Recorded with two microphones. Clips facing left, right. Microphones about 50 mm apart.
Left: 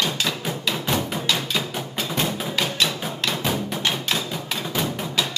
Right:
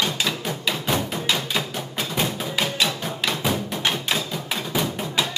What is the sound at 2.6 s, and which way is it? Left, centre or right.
Music, centre.